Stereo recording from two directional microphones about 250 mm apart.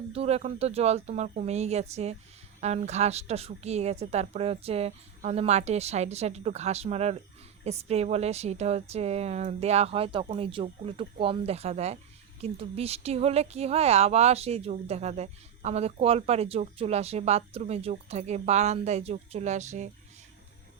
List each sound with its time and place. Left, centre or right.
0.1 s speech: right